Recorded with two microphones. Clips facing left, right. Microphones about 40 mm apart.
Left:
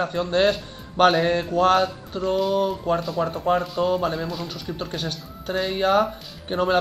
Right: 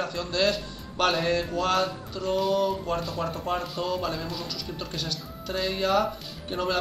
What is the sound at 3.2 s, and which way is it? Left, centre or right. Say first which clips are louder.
Speech: left 6 dB; centre.